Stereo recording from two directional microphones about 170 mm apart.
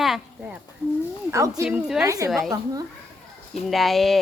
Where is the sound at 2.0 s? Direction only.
20° right (ahead or behind).